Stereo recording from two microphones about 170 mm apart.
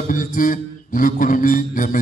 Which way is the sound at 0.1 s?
50° left (ahead or behind).